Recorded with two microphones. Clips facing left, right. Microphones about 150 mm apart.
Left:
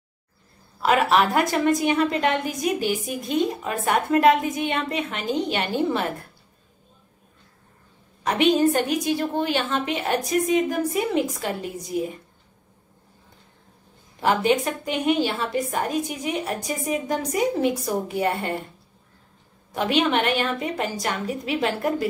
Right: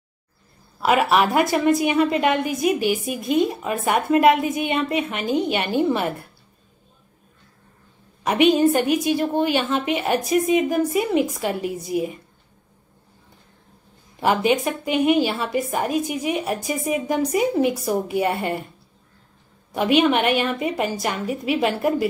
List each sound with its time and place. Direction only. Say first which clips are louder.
0.8 s a woman's voice: right 1 dB; 5° right (ahead or behind)
8.2 s a woman's voice: right 3 dB; 5° right (ahead or behind)
14.2 s a woman's voice: right 1 dB; 10° right (ahead or behind)
19.7 s a woman's voice: right 4 dB; 5° right (ahead or behind)